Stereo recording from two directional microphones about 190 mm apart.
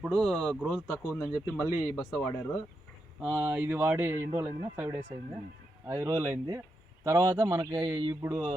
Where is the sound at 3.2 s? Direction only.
5° right (ahead or behind).